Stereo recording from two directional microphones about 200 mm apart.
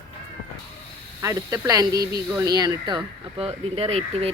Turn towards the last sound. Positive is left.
turn(degrees=-30)  # may be behind; listen again after turning